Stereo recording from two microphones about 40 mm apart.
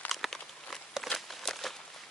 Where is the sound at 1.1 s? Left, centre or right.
Centre.